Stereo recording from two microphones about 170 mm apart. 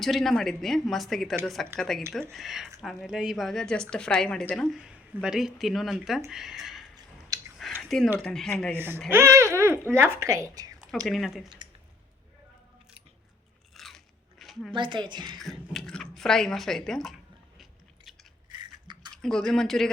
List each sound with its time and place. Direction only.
0.0 s speech: centre (ahead or behind)
6.9 s a sound: 20° right (ahead or behind)
7.8 s a sound: centre (ahead or behind)
8.2 s speech: 5° left (ahead or behind)
8.7 s speech: 15° right (ahead or behind)
11.0 s speech: centre (ahead or behind)
13.7 s biting: centre (ahead or behind)
14.7 s speech: 30° right (ahead or behind)
15.4 s speech: centre (ahead or behind)
17.6 s biting: centre (ahead or behind)
18.4 s a sound: 25° right (ahead or behind)
19.1 s speech: 5° left (ahead or behind)